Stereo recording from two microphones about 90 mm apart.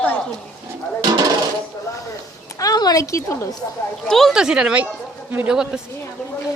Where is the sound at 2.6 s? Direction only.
45° left (ahead or behind).